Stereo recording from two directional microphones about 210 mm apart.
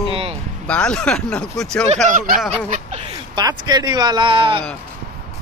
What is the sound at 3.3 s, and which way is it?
Speech, 20° right (ahead or behind).